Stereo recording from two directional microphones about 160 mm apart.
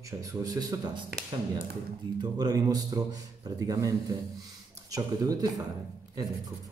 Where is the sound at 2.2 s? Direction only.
25° right (ahead or behind).